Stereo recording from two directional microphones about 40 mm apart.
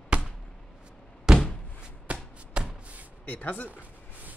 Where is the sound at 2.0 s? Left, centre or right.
Right.